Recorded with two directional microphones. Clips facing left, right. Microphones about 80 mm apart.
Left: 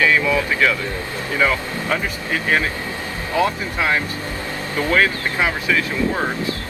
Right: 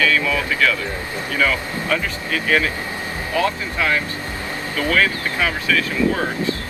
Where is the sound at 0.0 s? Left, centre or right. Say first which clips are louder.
Left 2 dB; left.